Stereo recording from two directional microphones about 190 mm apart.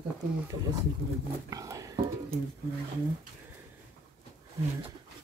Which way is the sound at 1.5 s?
15° right (ahead or behind).